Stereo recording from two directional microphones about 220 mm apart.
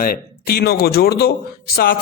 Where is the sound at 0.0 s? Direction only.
45° left (ahead or behind).